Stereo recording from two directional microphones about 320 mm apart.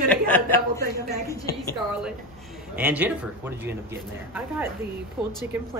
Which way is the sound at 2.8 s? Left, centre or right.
Centre.